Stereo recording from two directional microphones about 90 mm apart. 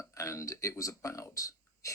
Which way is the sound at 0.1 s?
35° left (ahead or behind).